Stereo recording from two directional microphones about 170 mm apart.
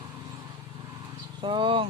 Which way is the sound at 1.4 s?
30° right (ahead or behind).